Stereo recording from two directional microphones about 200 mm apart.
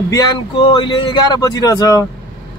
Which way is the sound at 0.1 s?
20° left (ahead or behind).